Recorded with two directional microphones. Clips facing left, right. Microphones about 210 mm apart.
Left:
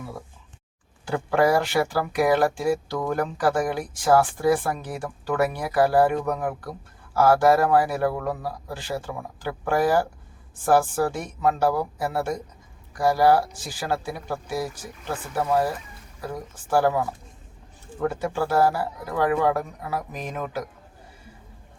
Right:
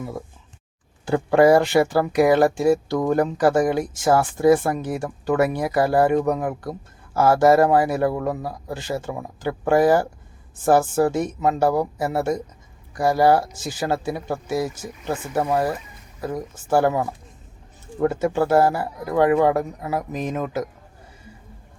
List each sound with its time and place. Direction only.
1.0 s speech: 25° right (ahead or behind)
18.1 s speech: 25° right (ahead or behind)